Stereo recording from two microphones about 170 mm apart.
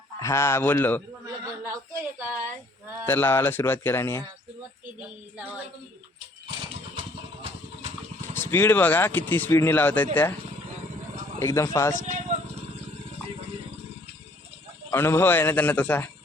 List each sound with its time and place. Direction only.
0.2 s speech: 15° left (ahead or behind)
1.6 s a sound: 15° right (ahead or behind)
3.1 s speech: 10° left (ahead or behind)
8.2 s speech: 15° left (ahead or behind)
11.3 s speech: 15° left (ahead or behind)
11.9 s speech: 45° right (ahead or behind)
14.8 s speech: 15° left (ahead or behind)